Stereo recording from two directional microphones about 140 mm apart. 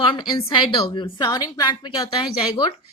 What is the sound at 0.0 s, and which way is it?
A woman's voice, 35° left (ahead or behind).